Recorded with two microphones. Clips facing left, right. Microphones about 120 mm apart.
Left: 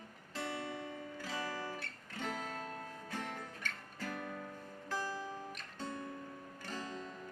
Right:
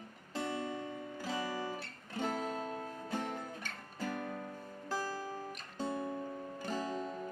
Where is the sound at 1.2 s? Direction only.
25° right (ahead or behind).